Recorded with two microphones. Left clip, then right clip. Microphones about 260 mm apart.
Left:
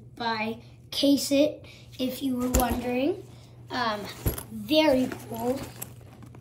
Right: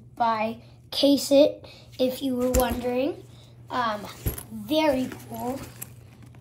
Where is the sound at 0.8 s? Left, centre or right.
Left.